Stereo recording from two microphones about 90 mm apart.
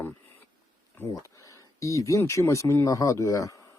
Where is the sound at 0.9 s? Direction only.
35° left (ahead or behind).